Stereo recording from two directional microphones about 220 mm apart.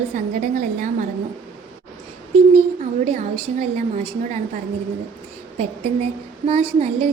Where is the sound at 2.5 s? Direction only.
30° right (ahead or behind).